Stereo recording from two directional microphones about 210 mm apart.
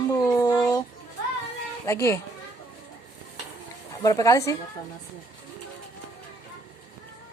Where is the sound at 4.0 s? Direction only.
15° left (ahead or behind).